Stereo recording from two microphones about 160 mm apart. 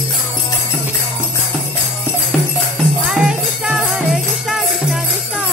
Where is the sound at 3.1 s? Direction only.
5° right (ahead or behind).